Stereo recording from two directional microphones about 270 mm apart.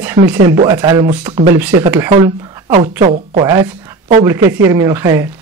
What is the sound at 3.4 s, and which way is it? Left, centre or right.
Speech, centre.